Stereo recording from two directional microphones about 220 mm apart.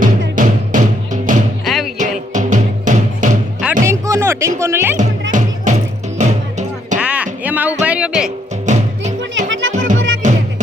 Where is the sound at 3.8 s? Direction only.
15° right (ahead or behind).